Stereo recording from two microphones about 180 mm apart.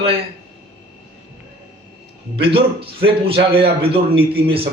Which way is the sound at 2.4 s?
30° right (ahead or behind).